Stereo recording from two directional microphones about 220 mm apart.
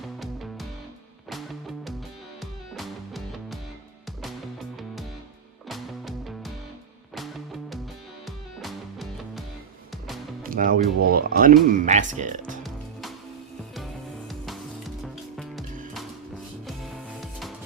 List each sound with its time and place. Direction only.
0.0 s music: centre (ahead or behind)
5.6 s music: centre (ahead or behind)
10.4 s speech: 40° right (ahead or behind)
12.6 s music: centre (ahead or behind)
14.3 s music: centre (ahead or behind)